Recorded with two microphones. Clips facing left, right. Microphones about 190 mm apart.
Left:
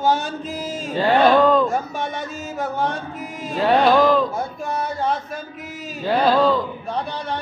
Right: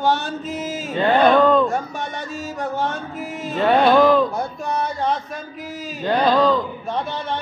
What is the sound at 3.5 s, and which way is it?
Chant, centre (ahead or behind).